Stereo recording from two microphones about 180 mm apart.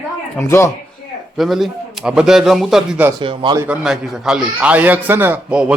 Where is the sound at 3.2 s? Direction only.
25° right (ahead or behind).